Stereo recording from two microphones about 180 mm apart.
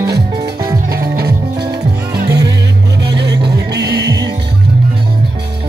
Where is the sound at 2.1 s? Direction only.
60° right (ahead or behind).